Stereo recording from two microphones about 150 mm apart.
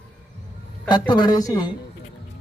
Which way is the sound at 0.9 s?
30° left (ahead or behind).